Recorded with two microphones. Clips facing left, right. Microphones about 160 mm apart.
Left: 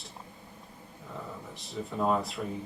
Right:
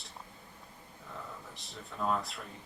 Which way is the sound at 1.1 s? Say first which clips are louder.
Left 5 dB; centre (ahead or behind).